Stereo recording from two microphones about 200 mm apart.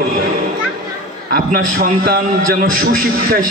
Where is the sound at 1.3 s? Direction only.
45° right (ahead or behind).